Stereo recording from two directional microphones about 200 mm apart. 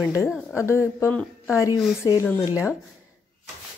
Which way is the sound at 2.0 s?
15° left (ahead or behind).